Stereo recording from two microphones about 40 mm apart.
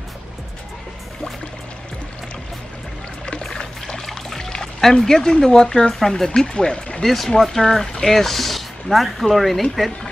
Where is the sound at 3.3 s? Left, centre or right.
Centre.